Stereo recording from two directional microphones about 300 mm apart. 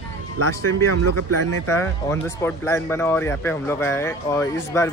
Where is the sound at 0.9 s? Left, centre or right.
Right.